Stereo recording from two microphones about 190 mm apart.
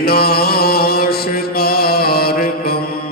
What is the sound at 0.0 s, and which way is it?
Chant, 55° left (ahead or behind).